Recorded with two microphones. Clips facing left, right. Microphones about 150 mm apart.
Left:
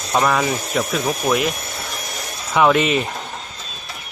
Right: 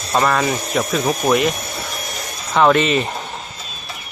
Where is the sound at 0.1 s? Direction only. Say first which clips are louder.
Right 1 dB; 5° left (ahead or behind).